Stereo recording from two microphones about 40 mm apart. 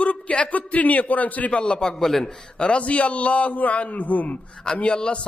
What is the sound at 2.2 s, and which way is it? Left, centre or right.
A man's voice, left.